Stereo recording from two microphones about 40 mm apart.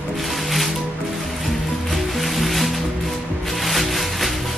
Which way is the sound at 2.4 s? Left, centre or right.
Centre.